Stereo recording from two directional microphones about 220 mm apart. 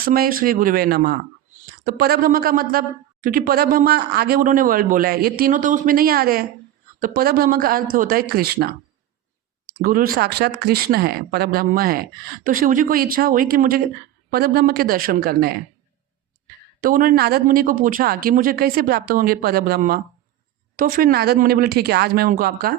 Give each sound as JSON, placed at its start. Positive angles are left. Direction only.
{"t": 0.0, "sound": "a woman's voice", "side_deg": -40}
{"t": 9.8, "sound": "a woman's voice", "side_deg": -40}
{"t": 16.8, "sound": "a woman's voice", "side_deg": -40}